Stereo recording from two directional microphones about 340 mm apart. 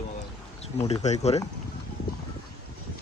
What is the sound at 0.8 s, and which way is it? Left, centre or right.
Speech, centre.